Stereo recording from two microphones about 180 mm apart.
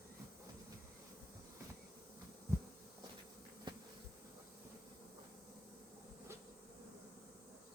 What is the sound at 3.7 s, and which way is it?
Bee, 25° right (ahead or behind).